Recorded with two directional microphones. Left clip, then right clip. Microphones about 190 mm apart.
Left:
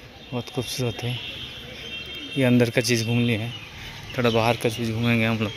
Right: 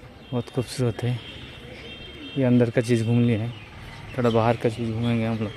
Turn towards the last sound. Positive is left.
turn(degrees=5)  # may be behind; listen again after turning